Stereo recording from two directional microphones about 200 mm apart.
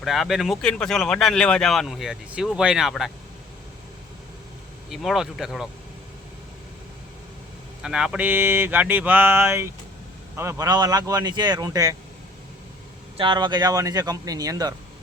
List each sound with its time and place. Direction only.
0.0 s speech: centre (ahead or behind)
4.9 s speech: centre (ahead or behind)
7.8 s speech: 5° right (ahead or behind)
13.1 s speech: 25° right (ahead or behind)